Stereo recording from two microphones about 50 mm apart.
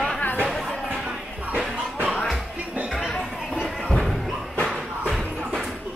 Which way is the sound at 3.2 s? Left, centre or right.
Centre.